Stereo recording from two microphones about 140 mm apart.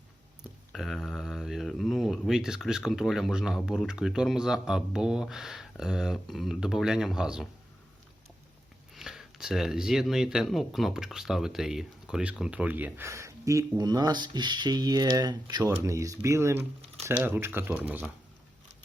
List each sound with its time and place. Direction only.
0.7 s speech: centre (ahead or behind)
9.0 s speech: 5° right (ahead or behind)